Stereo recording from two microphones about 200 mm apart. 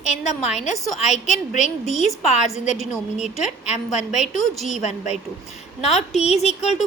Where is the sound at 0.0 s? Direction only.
35° left (ahead or behind).